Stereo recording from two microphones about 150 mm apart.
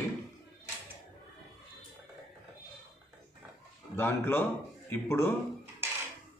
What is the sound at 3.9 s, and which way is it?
A man's voice, 15° left (ahead or behind).